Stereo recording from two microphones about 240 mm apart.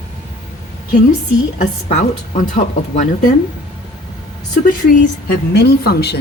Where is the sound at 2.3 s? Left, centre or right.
Left.